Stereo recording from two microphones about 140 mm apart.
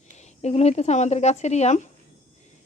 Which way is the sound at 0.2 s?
50° left (ahead or behind).